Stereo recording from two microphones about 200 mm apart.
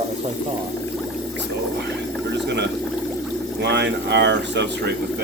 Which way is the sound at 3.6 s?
60° right (ahead or behind).